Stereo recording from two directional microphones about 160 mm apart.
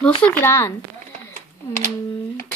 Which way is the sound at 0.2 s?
10° left (ahead or behind).